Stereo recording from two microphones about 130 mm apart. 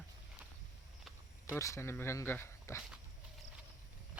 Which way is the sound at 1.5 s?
20° left (ahead or behind).